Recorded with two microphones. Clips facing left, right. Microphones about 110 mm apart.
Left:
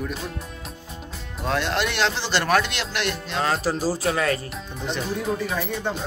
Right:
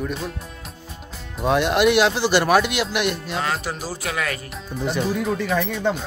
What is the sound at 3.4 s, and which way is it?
Speech, 35° left (ahead or behind).